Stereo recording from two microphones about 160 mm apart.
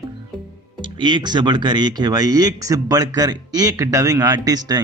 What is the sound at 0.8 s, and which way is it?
Speech, 30° right (ahead or behind).